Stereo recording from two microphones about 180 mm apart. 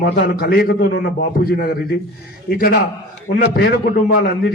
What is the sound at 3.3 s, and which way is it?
Speech, 45° left (ahead or behind).